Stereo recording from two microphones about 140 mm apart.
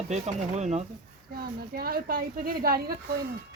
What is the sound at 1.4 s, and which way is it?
Speech, 90° right.